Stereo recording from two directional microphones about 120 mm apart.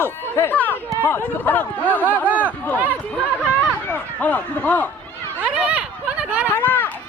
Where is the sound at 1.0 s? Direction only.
20° left (ahead or behind).